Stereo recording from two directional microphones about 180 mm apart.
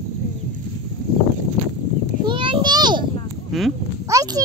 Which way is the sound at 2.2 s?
30° right (ahead or behind).